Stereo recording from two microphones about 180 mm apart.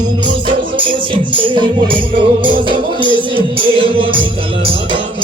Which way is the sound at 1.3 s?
25° right (ahead or behind).